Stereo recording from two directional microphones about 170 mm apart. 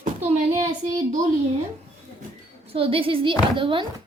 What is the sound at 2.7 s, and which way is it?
A woman's voice, 35° right (ahead or behind).